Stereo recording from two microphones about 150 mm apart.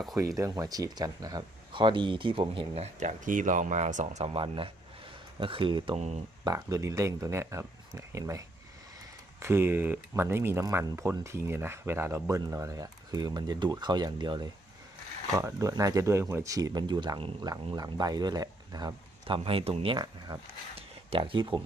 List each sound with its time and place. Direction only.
0.3 s speech: 20° right (ahead or behind)
6.4 s speech: 25° right (ahead or behind)
20.7 s a sound: 40° right (ahead or behind)